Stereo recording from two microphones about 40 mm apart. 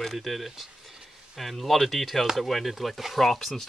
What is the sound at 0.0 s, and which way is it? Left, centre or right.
Speech, centre.